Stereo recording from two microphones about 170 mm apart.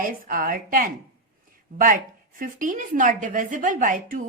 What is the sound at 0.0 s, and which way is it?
Speech, 55° right (ahead or behind).